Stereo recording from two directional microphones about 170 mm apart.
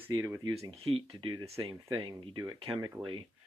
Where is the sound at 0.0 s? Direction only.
10° right (ahead or behind).